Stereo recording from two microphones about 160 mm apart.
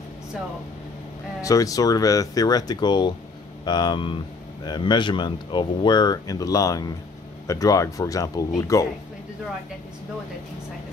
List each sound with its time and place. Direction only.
1.4 s speech: 20° left (ahead or behind)